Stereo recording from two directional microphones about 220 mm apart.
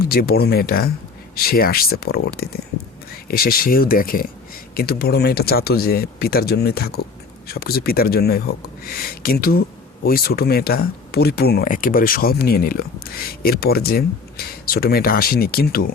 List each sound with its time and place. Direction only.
0.0 s speech: 45° left (ahead or behind)